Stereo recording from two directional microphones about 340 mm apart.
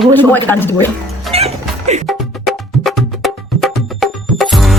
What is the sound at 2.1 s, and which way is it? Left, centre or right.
Music, centre.